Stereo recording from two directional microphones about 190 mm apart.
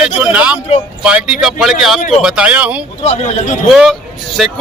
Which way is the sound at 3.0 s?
35° left (ahead or behind).